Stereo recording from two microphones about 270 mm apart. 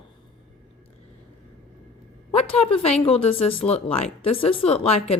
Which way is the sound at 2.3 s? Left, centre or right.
Left.